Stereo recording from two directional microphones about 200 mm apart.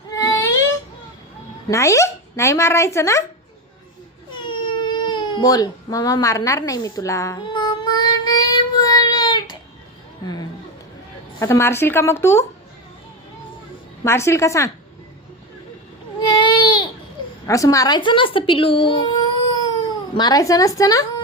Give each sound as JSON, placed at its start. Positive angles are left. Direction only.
{"t": 0.1, "sound": "a sound", "side_deg": 15}
{"t": 1.6, "sound": "speech", "side_deg": 15}
{"t": 4.4, "sound": "baby cry", "side_deg": 25}
{"t": 10.2, "sound": "chatter", "side_deg": 20}
{"t": 11.3, "sound": "speech", "side_deg": 15}
{"t": 14.0, "sound": "speech", "side_deg": 15}
{"t": 16.2, "sound": "baby cry", "side_deg": 25}
{"t": 17.4, "sound": "speech", "side_deg": 15}